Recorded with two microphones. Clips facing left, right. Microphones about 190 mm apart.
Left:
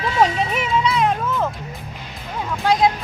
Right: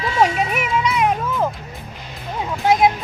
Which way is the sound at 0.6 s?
10° right (ahead or behind).